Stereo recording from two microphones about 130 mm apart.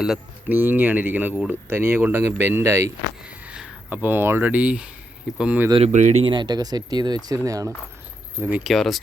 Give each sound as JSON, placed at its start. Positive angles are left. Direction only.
{"t": 0.4, "sound": "speech", "side_deg": -15}
{"t": 3.2, "sound": "speech", "side_deg": -10}
{"t": 5.9, "sound": "speech", "side_deg": -65}
{"t": 6.2, "sound": "speech", "side_deg": -35}
{"t": 8.4, "sound": "speech", "side_deg": -10}
{"t": 8.6, "sound": "speech", "side_deg": 0}